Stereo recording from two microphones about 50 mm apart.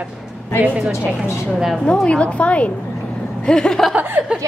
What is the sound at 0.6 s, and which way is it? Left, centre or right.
Speech, right.